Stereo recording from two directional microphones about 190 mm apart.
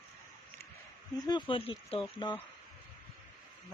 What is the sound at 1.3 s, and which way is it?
Speech, 25° left (ahead or behind).